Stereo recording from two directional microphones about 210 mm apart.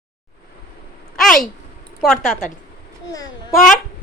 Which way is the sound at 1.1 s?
Centre (ahead or behind).